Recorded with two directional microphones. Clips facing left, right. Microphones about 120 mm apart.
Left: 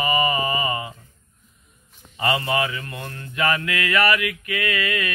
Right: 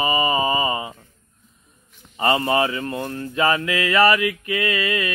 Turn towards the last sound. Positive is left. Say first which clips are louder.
# right 2 dB
turn(degrees=-25)  # may be behind; listen again after turning